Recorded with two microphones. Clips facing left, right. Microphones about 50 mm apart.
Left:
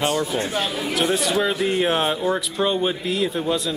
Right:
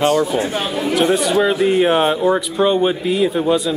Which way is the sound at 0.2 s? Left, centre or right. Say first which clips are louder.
Right 5 dB; centre.